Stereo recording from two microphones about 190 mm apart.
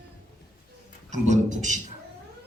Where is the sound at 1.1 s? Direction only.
40° right (ahead or behind).